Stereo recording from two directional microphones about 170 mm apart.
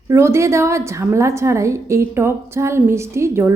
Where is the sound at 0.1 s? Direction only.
15° right (ahead or behind).